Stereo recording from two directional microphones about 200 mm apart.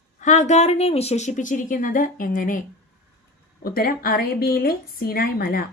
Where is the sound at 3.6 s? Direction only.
50° left (ahead or behind).